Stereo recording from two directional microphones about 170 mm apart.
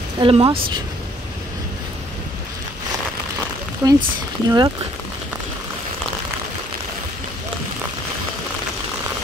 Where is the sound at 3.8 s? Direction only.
20° right (ahead or behind).